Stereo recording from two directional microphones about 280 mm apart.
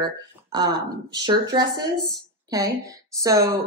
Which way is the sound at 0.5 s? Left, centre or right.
Centre.